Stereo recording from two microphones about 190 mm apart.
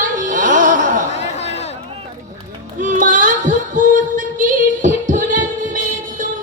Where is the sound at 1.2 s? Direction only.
35° left (ahead or behind).